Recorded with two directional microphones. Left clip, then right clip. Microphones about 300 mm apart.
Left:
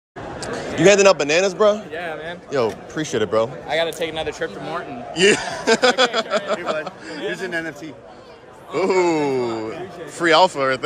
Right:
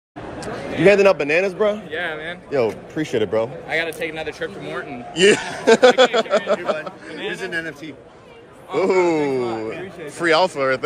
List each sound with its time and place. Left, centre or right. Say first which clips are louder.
0.4 s speech: left 1 dB; centre
3.7 s a man's voice: left 1 dB; centre
4.7 s speech: right 1 dB; centre
7.2 s a man's voice: even; left
8.7 s speech: right 1 dB; centre